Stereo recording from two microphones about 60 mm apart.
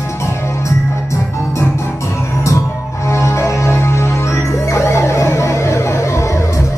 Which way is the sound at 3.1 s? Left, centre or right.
Left.